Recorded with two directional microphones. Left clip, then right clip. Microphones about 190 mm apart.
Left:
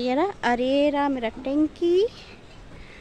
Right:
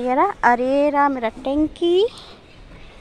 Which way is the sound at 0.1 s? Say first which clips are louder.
Right 9 dB; 25° left (ahead or behind).